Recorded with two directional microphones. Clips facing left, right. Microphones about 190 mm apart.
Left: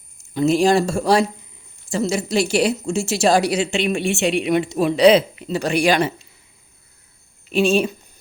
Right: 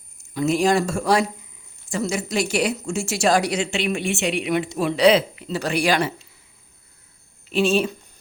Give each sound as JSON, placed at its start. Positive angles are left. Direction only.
{"t": 0.3, "sound": "speech", "side_deg": 30}
{"t": 7.5, "sound": "speech", "side_deg": 15}